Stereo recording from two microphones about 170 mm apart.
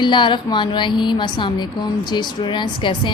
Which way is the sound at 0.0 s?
30° left (ahead or behind).